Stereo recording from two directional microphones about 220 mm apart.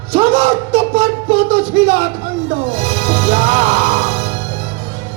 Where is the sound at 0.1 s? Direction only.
25° right (ahead or behind).